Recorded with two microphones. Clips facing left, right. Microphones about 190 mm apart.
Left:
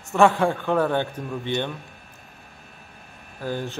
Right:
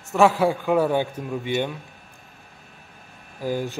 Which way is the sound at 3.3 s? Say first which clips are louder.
Right 3 dB; 10° right (ahead or behind).